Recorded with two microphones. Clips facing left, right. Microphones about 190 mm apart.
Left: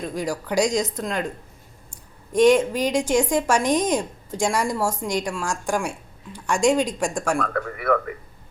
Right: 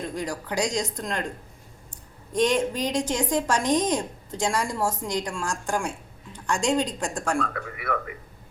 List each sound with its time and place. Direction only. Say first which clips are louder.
0.1 s a woman's voice: left 4 dB; 10° left (ahead or behind)
2.3 s a woman's voice: left 6 dB; 10° left (ahead or behind)
7.3 s a man's voice: left 3 dB; 55° left (ahead or behind)